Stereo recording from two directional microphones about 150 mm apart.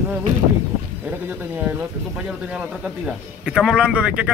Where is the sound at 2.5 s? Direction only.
5° right (ahead or behind).